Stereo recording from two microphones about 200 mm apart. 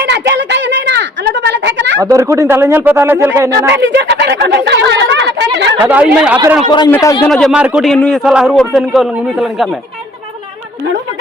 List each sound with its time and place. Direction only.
0.0 s a sound: 60° right (ahead or behind)
2.0 s speech: 15° right (ahead or behind)
3.7 s a sound: 60° right (ahead or behind)
5.8 s speech: 5° right (ahead or behind)
6.6 s a man's voice: 20° left (ahead or behind)
7.3 s a man's voice: centre (ahead or behind)